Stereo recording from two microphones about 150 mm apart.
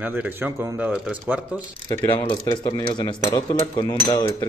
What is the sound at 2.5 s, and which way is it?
Speech, 30° left (ahead or behind).